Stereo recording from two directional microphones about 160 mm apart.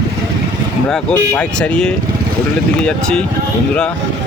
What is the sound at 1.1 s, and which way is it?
Speech, 5° left (ahead or behind).